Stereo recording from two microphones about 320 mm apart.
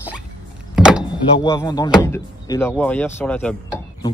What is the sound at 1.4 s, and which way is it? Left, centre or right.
Speech, centre.